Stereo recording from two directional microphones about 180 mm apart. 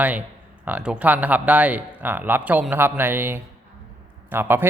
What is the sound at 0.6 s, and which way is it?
A man's voice, 5° right (ahead or behind).